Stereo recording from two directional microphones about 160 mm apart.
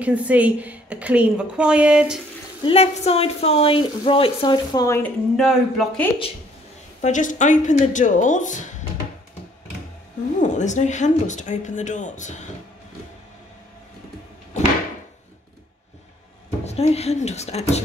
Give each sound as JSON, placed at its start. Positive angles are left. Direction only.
{"t": 0.0, "sound": "a woman's voice", "side_deg": -10}
{"t": 2.6, "sound": "speech", "side_deg": 40}
{"t": 4.7, "sound": "a woman's voice", "side_deg": 15}
{"t": 5.3, "sound": "speech", "side_deg": 0}
{"t": 7.0, "sound": "a woman's voice", "side_deg": 50}
{"t": 10.4, "sound": "a woman's voice", "side_deg": 50}
{"t": 16.6, "sound": "speech", "side_deg": 40}